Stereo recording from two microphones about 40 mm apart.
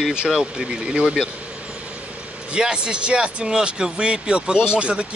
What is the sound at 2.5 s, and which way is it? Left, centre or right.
Speech, right.